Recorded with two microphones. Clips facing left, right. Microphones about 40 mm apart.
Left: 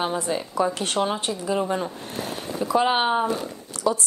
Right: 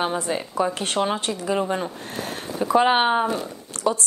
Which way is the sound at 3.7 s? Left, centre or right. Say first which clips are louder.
Right 1 dB; right.